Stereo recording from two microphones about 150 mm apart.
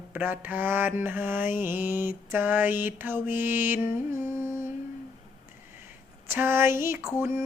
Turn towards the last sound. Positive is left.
turn(degrees=-20)  # may be behind; listen again after turning